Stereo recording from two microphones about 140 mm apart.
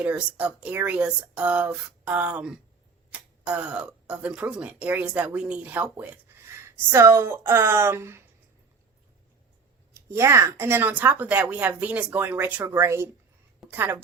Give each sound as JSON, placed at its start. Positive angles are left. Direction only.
{"t": 0.0, "sound": "a woman's voice", "side_deg": -10}
{"t": 9.9, "sound": "a woman's voice", "side_deg": -20}